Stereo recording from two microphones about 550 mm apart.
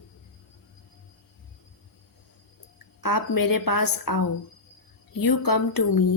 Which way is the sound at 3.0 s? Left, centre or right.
Left.